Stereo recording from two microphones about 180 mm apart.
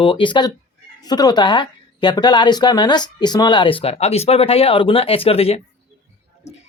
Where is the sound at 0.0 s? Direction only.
30° left (ahead or behind).